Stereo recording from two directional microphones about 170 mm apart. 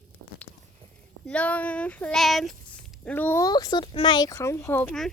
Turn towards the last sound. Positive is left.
turn(degrees=10)  # may be behind; listen again after turning